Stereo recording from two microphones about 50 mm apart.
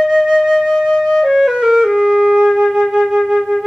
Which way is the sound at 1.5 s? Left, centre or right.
Centre.